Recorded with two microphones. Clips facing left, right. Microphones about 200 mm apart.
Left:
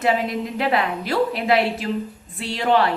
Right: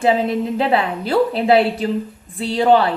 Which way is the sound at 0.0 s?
30° right (ahead or behind).